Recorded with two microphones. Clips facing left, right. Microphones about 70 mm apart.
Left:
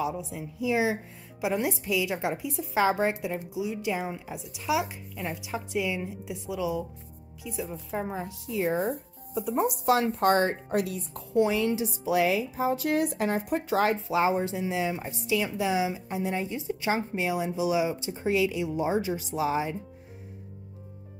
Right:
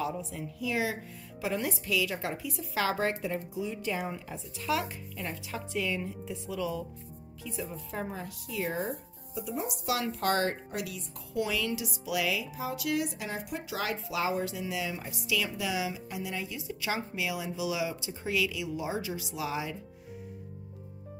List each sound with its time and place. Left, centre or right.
0.0 s a woman's voice: centre
9.3 s speech: left
9.9 s a woman's voice: left
10.7 s a woman's voice: left
13.9 s a woman's voice: left